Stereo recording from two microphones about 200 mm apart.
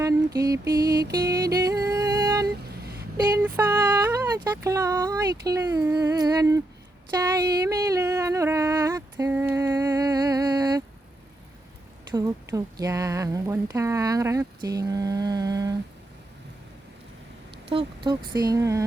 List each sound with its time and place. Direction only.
0.0 s mantra: 15° right (ahead or behind)
1.1 s music: 20° right (ahead or behind)
2.5 s a sound: 50° right (ahead or behind)
3.3 s a woman's voice: 10° right (ahead or behind)
7.2 s a sound: 15° right (ahead or behind)
12.1 s a woman's voice: 15° right (ahead or behind)
17.7 s speech: 25° right (ahead or behind)